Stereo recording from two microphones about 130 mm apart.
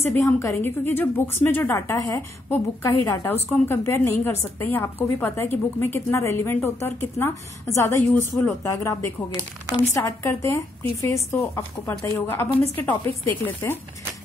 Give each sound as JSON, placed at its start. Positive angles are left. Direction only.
{"t": 0.0, "sound": "a woman's voice", "side_deg": 20}